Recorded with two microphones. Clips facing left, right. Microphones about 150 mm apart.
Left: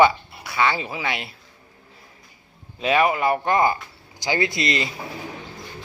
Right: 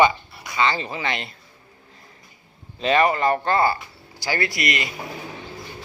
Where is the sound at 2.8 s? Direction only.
5° left (ahead or behind); by 4.9 s 30° left (ahead or behind).